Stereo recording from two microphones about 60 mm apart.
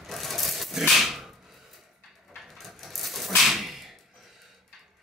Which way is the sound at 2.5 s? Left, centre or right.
Centre.